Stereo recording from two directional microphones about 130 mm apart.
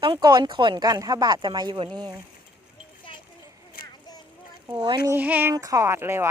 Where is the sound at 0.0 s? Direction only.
35° right (ahead or behind).